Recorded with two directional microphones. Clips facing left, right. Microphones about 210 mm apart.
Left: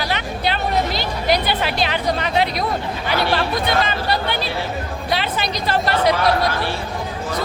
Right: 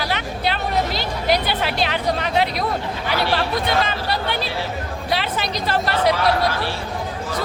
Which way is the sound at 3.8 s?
Centre (ahead or behind).